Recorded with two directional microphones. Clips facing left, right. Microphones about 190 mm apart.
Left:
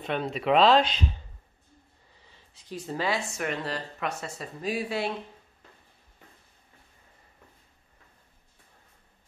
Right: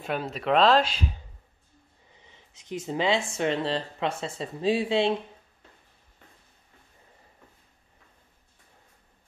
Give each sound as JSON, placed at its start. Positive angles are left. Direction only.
{"t": 0.0, "sound": "speech", "side_deg": -5}
{"t": 2.1, "sound": "a sound", "side_deg": -20}
{"t": 3.3, "sound": "speech", "side_deg": -25}